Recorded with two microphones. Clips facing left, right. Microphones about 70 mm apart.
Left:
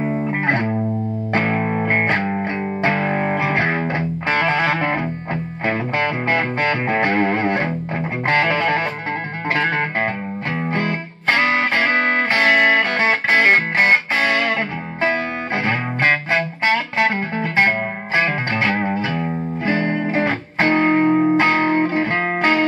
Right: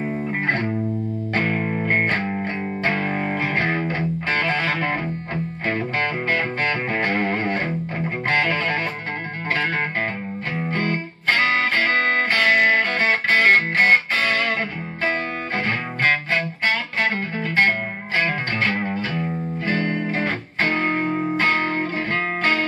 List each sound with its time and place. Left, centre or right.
0.0 s music: centre
10.7 s music: centre; by 21.3 s left
21.4 s music: centre